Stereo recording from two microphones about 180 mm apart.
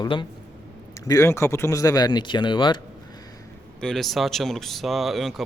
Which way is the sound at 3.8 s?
5° left (ahead or behind).